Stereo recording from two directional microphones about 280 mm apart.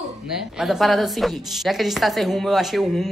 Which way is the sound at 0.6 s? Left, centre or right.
Centre.